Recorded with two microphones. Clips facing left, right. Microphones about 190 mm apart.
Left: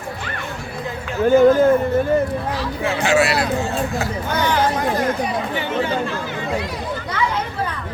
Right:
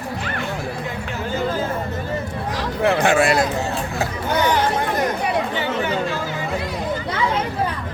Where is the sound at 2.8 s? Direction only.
60° right (ahead or behind).